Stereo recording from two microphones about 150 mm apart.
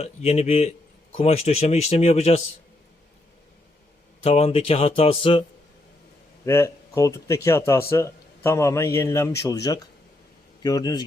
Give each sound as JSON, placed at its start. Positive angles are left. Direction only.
{"t": 0.0, "sound": "speech", "side_deg": 45}
{"t": 4.2, "sound": "speech", "side_deg": 40}
{"t": 6.4, "sound": "a man's voice", "side_deg": 20}